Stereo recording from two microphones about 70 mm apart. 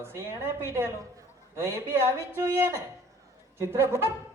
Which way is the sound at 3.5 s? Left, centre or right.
Right.